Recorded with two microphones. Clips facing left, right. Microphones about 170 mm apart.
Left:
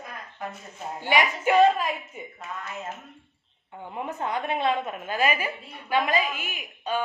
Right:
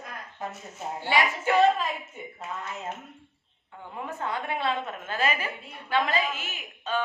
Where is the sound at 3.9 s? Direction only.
20° left (ahead or behind).